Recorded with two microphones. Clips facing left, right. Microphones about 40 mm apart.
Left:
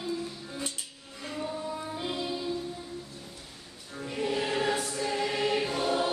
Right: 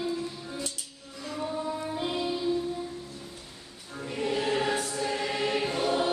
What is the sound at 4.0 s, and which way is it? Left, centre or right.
Choir, centre.